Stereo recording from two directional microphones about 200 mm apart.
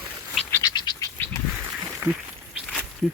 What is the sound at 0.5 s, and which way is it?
Bird, 20° left (ahead or behind).